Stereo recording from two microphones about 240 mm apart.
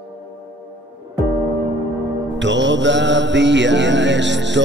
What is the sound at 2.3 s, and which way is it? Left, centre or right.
Music, right.